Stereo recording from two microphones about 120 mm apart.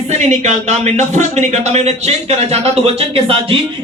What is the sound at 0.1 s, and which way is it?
Speech, 70° right (ahead or behind).